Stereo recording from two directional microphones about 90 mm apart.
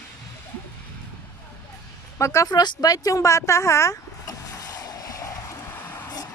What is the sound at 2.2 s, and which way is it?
Speech, 35° left (ahead or behind).